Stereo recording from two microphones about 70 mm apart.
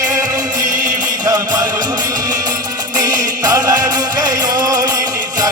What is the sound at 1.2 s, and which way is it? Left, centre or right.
Music, right.